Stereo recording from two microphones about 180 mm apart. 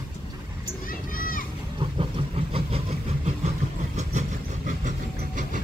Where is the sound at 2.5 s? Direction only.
35° right (ahead or behind).